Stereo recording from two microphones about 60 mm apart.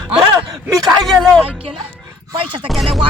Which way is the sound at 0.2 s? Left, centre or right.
Right.